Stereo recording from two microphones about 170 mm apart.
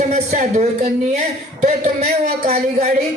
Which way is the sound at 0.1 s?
40° right (ahead or behind).